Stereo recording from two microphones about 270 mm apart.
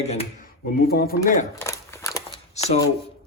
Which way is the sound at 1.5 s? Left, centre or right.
Centre.